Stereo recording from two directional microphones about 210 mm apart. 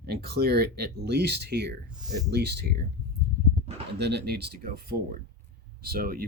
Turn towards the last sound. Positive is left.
turn(degrees=-45)  # may be behind; listen again after turning